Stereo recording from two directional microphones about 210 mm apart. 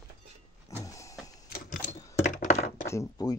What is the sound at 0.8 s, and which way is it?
Vehicle, 15° left (ahead or behind).